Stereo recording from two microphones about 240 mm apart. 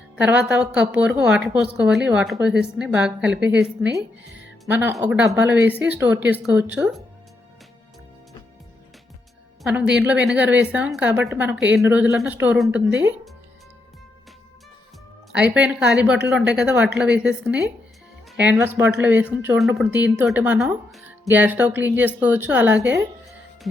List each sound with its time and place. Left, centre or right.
0.2 s a woman's voice: centre
4.2 s music: right
4.6 s speech: centre
9.6 s a woman's voice: centre
15.3 s a woman's voice: centre